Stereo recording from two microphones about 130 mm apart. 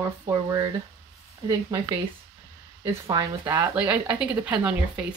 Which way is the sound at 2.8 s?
30° right (ahead or behind).